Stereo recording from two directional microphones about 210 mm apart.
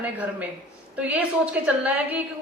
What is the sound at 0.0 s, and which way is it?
A woman's voice, 5° right (ahead or behind).